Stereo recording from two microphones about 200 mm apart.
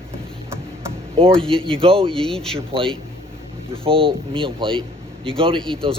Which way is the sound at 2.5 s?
25° right (ahead or behind).